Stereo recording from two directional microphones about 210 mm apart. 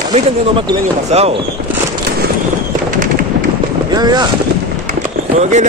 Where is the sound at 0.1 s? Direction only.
25° right (ahead or behind).